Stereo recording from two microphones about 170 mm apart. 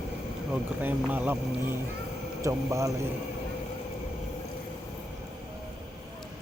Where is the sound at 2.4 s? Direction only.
15° right (ahead or behind).